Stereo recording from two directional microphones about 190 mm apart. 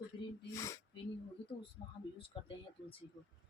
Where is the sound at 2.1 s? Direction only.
30° left (ahead or behind).